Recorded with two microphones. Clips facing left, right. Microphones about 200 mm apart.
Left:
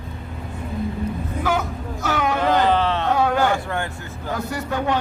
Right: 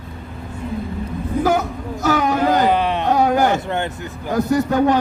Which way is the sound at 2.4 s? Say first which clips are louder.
Even; 15° right (ahead or behind).